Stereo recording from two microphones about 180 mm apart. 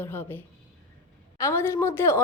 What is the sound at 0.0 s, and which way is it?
A woman's voice, 10° left (ahead or behind).